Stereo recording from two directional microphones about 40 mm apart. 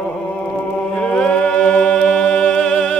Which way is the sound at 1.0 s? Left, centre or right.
Centre.